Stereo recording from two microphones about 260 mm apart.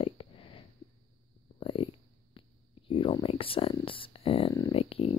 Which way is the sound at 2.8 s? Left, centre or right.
Centre.